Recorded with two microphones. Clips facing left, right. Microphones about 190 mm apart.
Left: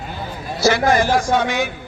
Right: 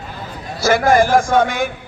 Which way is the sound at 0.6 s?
50° right (ahead or behind).